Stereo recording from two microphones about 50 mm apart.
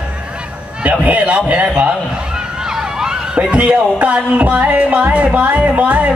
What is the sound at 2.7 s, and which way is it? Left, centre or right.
Emergency vehicle, centre.